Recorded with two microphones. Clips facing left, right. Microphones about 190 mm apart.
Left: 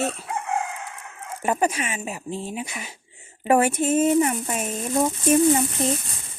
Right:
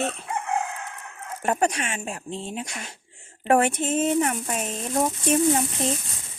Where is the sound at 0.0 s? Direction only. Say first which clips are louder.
Left 1 dB; 5° left (ahead or behind).